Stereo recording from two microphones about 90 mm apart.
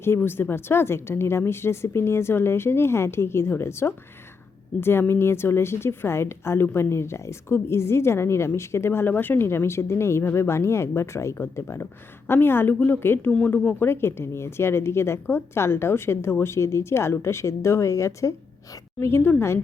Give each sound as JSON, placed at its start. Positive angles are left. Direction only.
{"t": 0.0, "sound": "a woman's voice", "side_deg": 25}